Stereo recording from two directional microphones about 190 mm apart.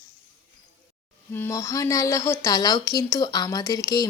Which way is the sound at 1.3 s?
15° left (ahead or behind).